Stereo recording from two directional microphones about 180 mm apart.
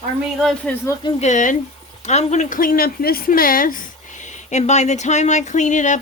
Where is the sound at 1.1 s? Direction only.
40° left (ahead or behind).